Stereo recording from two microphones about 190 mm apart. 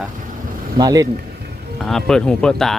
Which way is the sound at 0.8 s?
20° right (ahead or behind).